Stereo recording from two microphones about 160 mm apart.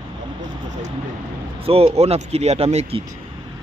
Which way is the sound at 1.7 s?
40° right (ahead or behind).